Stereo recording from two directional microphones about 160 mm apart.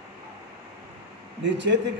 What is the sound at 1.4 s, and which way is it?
Speech, 90° right.